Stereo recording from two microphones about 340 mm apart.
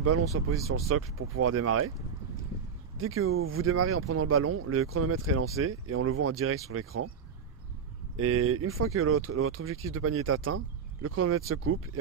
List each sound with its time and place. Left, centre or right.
0.3 s speech: right
3.0 s speech: right
8.2 s speech: right